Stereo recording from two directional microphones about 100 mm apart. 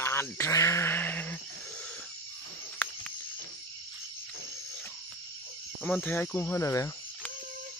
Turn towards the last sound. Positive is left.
turn(degrees=30)  # may be behind; listen again after turning